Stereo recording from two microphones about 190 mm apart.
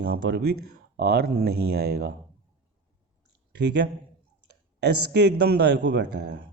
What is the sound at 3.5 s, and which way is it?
Speech, 60° right (ahead or behind).